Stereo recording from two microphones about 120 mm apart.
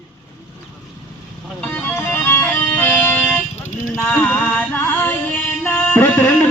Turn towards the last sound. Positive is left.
turn(degrees=15)  # may be behind; listen again after turning